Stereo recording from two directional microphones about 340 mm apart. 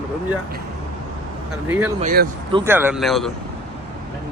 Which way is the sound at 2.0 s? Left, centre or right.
Right.